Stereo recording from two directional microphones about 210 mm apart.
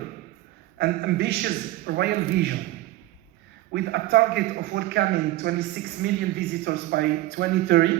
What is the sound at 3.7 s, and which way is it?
A woman's voice, 50° right (ahead or behind).